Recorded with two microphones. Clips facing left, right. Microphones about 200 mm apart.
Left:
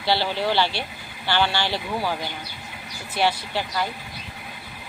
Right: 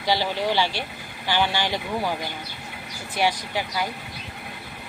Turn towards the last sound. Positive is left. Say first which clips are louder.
# left 1 dB
turn(degrees=-10)  # may be behind; listen again after turning